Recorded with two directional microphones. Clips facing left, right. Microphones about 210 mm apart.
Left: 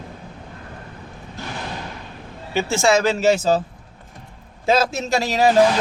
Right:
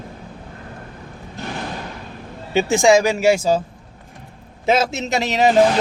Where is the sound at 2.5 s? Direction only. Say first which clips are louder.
Right 4 dB; 15° right (ahead or behind).